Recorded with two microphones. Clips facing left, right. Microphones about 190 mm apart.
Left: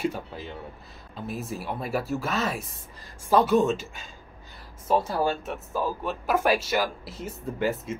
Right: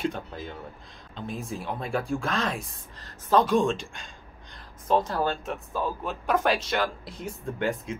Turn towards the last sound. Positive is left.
turn(degrees=5)  # may be behind; listen again after turning